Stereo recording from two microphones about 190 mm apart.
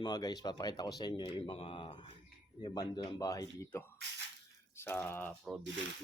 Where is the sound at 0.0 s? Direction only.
20° left (ahead or behind).